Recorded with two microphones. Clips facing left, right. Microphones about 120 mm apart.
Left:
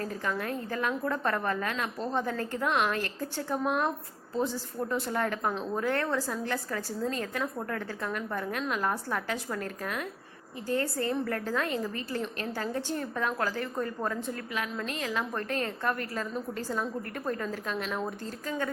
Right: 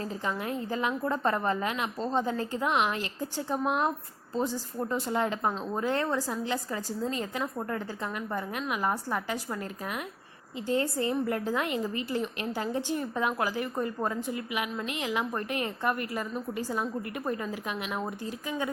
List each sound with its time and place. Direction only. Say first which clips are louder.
0.3 s a woman's voice: right 1 dB; 15° right (ahead or behind)